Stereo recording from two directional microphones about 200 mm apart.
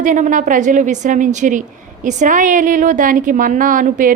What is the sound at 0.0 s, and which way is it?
A woman's voice, 40° right (ahead or behind).